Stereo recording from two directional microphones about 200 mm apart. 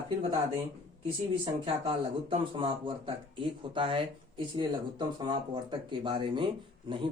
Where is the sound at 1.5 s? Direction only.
25° right (ahead or behind).